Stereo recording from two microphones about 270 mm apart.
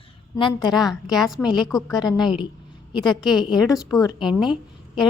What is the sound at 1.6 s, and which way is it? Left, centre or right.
Speech, centre.